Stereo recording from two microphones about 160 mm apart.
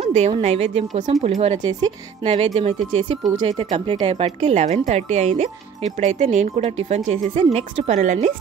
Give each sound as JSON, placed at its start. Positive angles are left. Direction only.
{"t": 0.0, "sound": "a woman's voice", "side_deg": -45}